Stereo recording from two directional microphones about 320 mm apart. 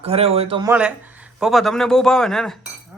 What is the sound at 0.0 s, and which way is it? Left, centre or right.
Speech, centre.